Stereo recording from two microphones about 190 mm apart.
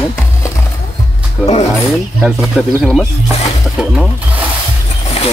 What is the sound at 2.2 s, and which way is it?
Speech, 5° right (ahead or behind).